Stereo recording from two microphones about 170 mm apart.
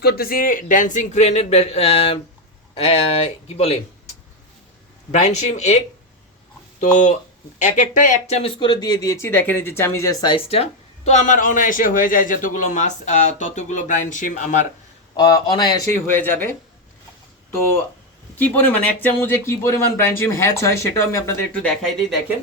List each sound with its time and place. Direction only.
0.0 s speech: 65° left (ahead or behind); by 3.8 s 35° left (ahead or behind)
5.1 s speech: 45° left (ahead or behind)
6.7 s speech: 45° left (ahead or behind)
8.4 s speech: 30° left (ahead or behind); by 14.7 s 45° left (ahead or behind)
15.1 s speech: 25° left (ahead or behind)
16.0 s speech: 10° left (ahead or behind)
18.3 s speech: 10° left (ahead or behind)